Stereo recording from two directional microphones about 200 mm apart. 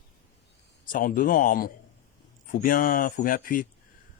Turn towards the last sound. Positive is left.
turn(degrees=45)  # may be behind; listen again after turning